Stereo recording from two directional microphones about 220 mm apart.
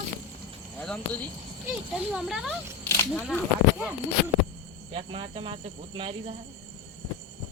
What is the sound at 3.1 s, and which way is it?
Speech, centre (ahead or behind).